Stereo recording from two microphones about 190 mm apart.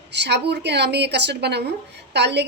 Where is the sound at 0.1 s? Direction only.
60° right (ahead or behind).